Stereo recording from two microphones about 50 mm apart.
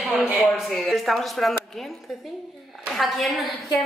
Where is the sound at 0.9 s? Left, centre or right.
Centre.